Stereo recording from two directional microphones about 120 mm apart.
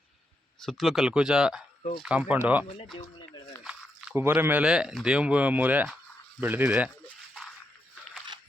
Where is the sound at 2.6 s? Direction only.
50° left (ahead or behind).